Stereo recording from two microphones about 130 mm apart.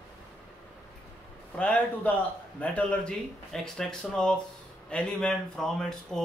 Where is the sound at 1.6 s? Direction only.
10° left (ahead or behind).